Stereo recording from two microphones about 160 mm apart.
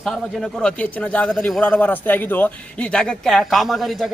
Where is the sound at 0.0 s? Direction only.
5° left (ahead or behind).